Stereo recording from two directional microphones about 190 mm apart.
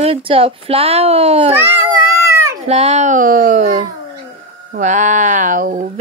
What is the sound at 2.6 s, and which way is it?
Speech, 35° right (ahead or behind).